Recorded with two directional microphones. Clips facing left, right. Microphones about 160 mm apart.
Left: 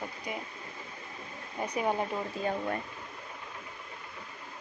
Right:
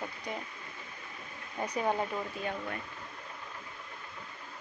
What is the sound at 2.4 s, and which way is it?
Speech, 35° left (ahead or behind).